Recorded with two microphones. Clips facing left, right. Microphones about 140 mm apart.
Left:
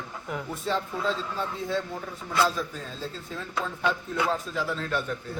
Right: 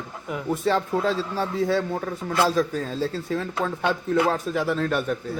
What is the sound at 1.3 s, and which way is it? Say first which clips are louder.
A man's voice: right 7 dB; 80° right.